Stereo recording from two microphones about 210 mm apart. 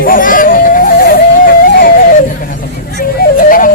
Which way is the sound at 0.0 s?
40° left (ahead or behind).